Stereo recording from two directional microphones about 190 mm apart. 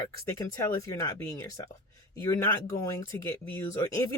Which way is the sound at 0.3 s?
15° left (ahead or behind).